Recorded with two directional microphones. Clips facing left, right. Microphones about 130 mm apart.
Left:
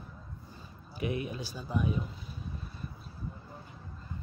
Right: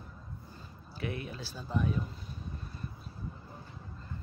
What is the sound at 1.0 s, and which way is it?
Speech, 15° left (ahead or behind).